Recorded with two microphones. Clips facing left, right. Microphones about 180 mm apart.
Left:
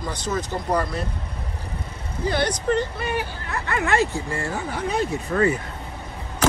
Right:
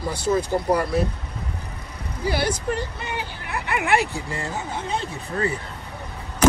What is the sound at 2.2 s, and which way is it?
Speech, 10° right (ahead or behind).